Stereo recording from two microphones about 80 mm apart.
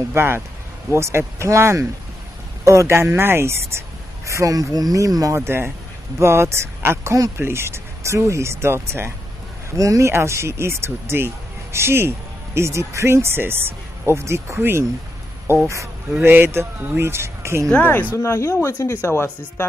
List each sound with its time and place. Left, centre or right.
0.1 s speech: right
4.3 s speech: right
9.7 s speech: right
16.3 s speech: right
17.6 s speech: centre
18.1 s speech: left